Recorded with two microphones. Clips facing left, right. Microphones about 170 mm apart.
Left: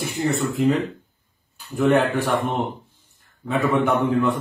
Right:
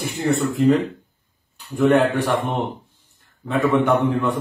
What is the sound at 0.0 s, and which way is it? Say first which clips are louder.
Speech: right 2 dB; centre (ahead or behind).